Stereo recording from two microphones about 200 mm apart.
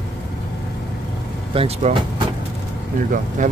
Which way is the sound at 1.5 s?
30° right (ahead or behind).